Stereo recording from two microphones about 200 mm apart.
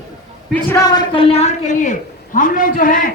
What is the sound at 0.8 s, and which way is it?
A woman's voice, 20° left (ahead or behind).